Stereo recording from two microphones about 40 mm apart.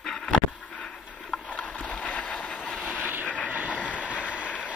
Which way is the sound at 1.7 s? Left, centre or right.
Left.